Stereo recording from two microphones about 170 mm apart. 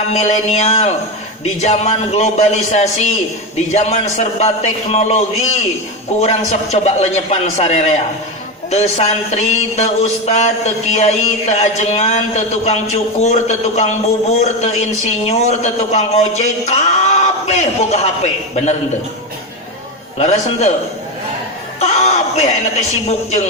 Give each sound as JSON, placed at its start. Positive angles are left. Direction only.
{"t": 0.1, "sound": "a man's voice", "side_deg": 40}
{"t": 20.1, "sound": "a man's voice", "side_deg": 40}
{"t": 21.8, "sound": "speech", "side_deg": 40}